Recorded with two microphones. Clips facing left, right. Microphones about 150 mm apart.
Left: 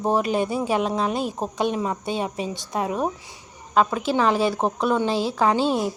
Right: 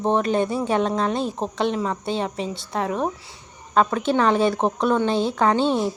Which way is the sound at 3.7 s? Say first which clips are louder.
Right 1 dB; 5° left (ahead or behind).